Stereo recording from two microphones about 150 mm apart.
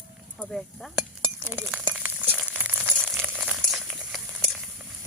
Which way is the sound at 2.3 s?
10° right (ahead or behind).